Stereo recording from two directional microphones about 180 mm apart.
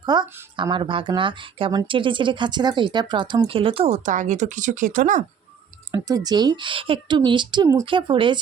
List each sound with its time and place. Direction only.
0.0 s speech: 25° right (ahead or behind); by 5.2 s 45° right (ahead or behind)
5.9 s speech: 20° right (ahead or behind)